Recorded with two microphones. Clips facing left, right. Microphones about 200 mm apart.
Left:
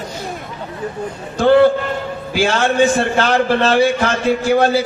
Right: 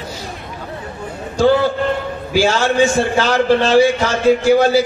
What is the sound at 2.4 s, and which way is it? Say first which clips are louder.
A man's voice: right 1 dB; 55° left (ahead or behind).